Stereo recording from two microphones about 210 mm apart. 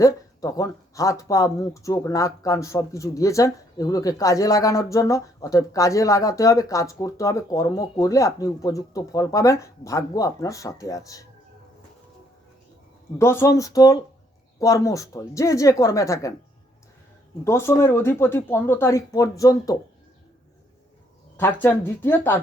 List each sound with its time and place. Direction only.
0.0 s speech: 15° left (ahead or behind)
13.1 s speech: 10° left (ahead or behind)
17.4 s speech: 10° left (ahead or behind)
21.3 s speech: 10° left (ahead or behind)